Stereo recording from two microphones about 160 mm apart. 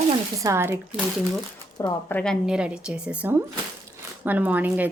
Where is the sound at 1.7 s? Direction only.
20° left (ahead or behind).